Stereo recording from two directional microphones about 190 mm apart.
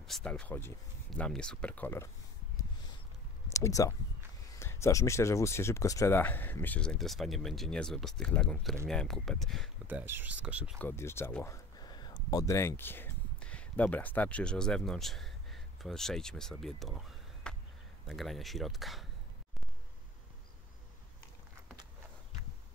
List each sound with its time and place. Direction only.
0.0 s speech: 5° left (ahead or behind)
3.5 s speech: 15° left (ahead or behind); by 9.7 s centre (ahead or behind)
9.8 s speech: 10° right (ahead or behind)
10.8 s speech: 10° left (ahead or behind)